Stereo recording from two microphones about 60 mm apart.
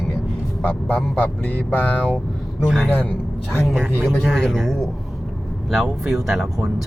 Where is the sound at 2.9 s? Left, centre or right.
Left.